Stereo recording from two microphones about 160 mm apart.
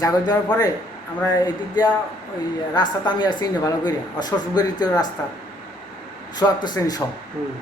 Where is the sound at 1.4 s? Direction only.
25° left (ahead or behind).